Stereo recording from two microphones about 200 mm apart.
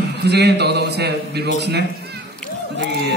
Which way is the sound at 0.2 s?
55° right (ahead or behind).